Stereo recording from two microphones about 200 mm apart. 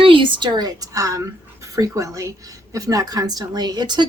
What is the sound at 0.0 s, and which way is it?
A woman's voice, 25° right (ahead or behind).